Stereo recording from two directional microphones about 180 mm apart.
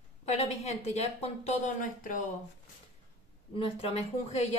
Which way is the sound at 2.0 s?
50° left (ahead or behind).